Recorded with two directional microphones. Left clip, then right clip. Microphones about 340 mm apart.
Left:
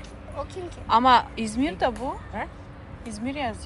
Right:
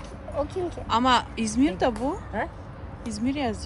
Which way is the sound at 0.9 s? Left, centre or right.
Centre.